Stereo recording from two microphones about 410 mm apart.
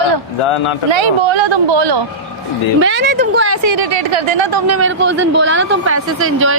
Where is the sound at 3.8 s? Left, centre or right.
Right.